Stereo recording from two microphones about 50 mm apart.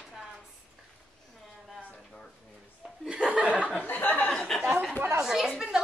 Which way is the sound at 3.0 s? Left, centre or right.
Right.